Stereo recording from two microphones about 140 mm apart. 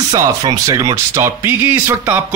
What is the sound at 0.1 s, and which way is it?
Speech, 25° right (ahead or behind).